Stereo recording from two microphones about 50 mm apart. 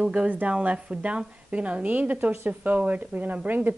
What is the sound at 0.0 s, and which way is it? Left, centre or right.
Speech, centre.